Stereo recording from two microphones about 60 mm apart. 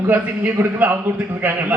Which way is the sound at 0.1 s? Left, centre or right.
Right.